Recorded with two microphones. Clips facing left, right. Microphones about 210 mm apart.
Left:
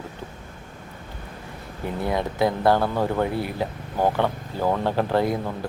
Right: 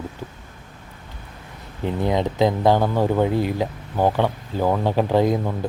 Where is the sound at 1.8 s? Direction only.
20° right (ahead or behind).